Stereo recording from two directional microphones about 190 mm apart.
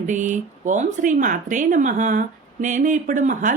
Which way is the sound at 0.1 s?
40° right (ahead or behind).